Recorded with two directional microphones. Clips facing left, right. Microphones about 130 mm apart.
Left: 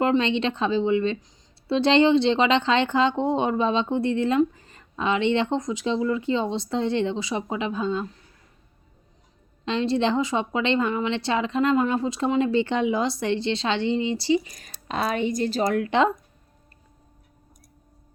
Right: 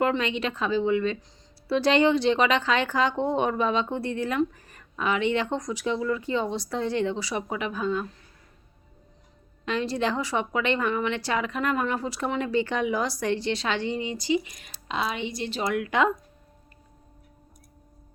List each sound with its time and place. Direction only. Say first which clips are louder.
0.0 s a woman's voice: left 4 dB; 25° left (ahead or behind)
9.6 s a woman's voice: left 4 dB; 25° left (ahead or behind)